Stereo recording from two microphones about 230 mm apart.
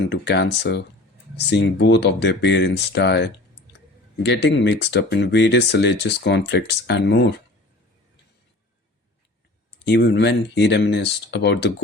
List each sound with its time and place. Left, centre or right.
0.1 s speech: left
9.8 s speech: left